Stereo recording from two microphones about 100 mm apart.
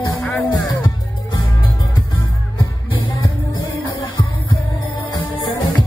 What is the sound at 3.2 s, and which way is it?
Music, 40° left (ahead or behind).